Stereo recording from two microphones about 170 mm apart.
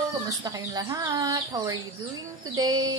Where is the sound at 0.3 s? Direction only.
20° right (ahead or behind).